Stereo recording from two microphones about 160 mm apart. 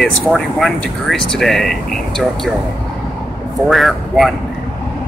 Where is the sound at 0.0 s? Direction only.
Centre (ahead or behind).